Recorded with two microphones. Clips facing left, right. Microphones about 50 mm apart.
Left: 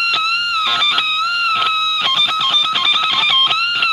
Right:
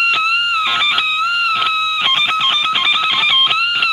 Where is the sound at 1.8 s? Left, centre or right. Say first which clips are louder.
Right 1 dB; right.